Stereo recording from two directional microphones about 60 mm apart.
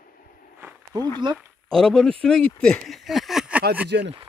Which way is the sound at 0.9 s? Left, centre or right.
Right.